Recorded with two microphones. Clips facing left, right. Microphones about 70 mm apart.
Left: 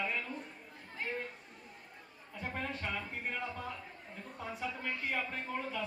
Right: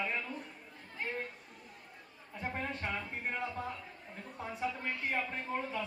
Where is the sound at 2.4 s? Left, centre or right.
Centre.